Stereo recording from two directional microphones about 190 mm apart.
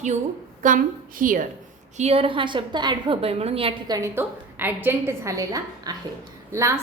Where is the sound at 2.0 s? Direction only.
30° right (ahead or behind).